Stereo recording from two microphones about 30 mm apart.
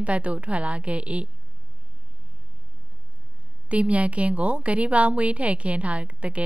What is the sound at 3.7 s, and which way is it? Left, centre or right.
A woman's voice, right.